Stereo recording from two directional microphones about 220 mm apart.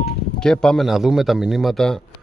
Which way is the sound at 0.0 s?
5° left (ahead or behind).